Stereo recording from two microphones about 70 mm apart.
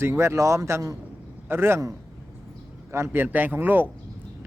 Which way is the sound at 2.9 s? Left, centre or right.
Right.